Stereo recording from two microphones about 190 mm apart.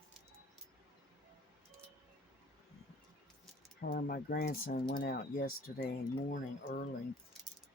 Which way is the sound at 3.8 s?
50° left (ahead or behind).